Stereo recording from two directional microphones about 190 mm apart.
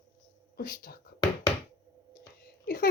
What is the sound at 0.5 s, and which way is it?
Speech, 50° left (ahead or behind).